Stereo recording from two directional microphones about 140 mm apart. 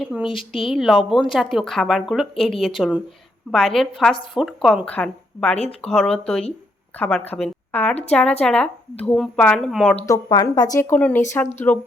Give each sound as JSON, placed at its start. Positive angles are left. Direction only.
{"t": 0.0, "sound": "a woman's voice", "side_deg": -5}
{"t": 5.5, "sound": "speech", "side_deg": 50}
{"t": 5.9, "sound": "a woman's voice", "side_deg": 5}
{"t": 10.1, "sound": "a woman's voice", "side_deg": 30}